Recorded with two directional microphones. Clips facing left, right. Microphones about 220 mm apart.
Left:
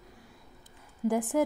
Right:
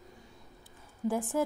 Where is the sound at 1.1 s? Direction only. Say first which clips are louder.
Left 3 dB; 15° left (ahead or behind).